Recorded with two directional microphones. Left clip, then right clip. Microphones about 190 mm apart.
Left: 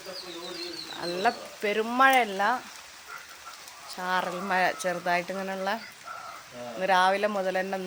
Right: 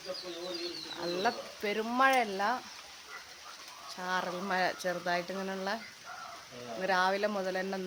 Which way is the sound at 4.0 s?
10° left (ahead or behind).